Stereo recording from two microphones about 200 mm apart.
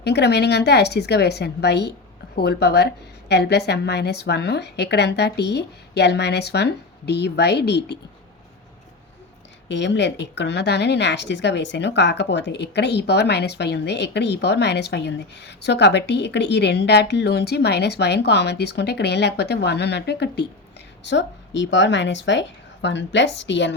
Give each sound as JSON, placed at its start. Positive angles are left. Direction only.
{"t": 0.0, "sound": "speech", "side_deg": 55}
{"t": 9.6, "sound": "speech", "side_deg": 60}